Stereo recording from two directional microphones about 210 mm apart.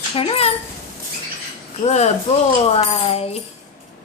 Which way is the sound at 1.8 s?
30° left (ahead or behind).